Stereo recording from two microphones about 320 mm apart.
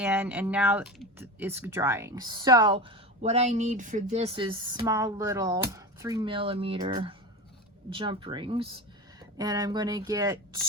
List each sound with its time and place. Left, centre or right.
0.0 s speech: centre